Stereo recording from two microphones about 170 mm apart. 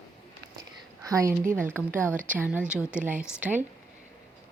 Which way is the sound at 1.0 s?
20° right (ahead or behind).